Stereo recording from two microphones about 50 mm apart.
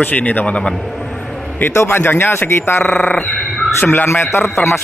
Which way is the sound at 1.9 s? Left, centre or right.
Left.